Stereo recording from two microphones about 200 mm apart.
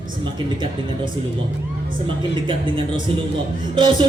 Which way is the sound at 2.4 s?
25° right (ahead or behind).